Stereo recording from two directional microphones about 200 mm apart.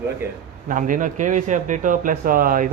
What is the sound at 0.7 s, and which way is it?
Speech, 40° right (ahead or behind).